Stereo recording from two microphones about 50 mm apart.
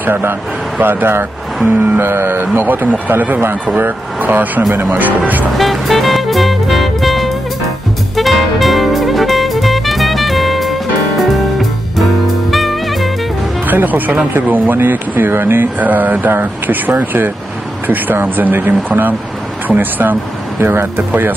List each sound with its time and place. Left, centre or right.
0.0 s speech: right
2.7 s speech: right
5.5 s music: centre
12.4 s music: centre
13.7 s speech: right
15.8 s speech: right
20.6 s speech: right
21.1 s speech: right